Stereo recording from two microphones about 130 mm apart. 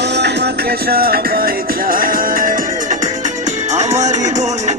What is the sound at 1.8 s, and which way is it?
Music, 90° right.